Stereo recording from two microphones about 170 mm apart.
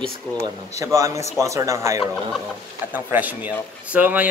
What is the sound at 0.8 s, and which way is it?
A man's voice, 15° right (ahead or behind).